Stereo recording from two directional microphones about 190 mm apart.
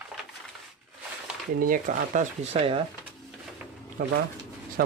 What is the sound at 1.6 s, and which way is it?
Speech, 45° right (ahead or behind).